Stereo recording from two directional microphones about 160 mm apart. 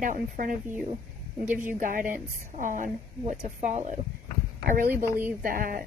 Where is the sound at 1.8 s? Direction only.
55° right (ahead or behind).